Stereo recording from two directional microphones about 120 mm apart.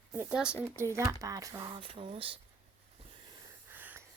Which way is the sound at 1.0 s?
30° right (ahead or behind).